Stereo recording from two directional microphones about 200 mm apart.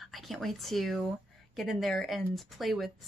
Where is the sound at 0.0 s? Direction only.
Centre (ahead or behind).